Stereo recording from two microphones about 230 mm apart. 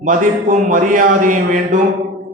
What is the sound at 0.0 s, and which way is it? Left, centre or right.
Mantra, right.